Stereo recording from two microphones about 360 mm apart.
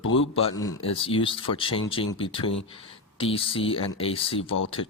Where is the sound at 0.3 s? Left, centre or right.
Centre.